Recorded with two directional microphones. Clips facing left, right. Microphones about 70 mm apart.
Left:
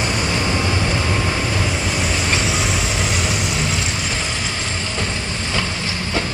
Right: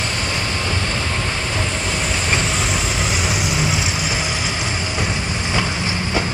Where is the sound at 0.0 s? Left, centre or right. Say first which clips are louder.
Left 3 dB; centre.